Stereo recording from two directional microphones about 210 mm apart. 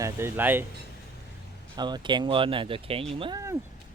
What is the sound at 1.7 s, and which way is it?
Speech, 20° right (ahead or behind).